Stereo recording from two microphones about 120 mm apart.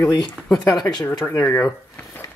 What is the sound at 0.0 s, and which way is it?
Speech, 30° left (ahead or behind).